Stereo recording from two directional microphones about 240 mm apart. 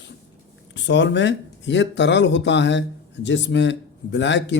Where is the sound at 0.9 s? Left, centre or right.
Left.